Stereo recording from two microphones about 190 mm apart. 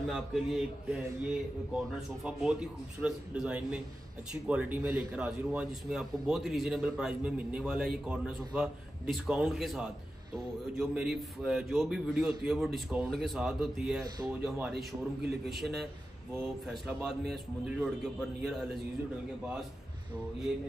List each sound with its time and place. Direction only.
0.0 s a man's voice: centre (ahead or behind)
14.0 s speech: 20° right (ahead or behind)
14.4 s a man's voice: centre (ahead or behind)
17.3 s a man's voice: 5° right (ahead or behind)